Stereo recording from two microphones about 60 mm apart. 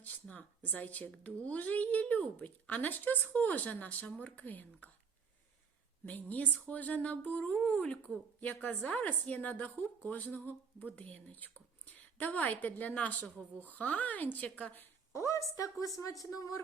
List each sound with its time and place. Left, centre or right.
0.0 s speech: left
6.1 s speech: left
15.1 s speech: left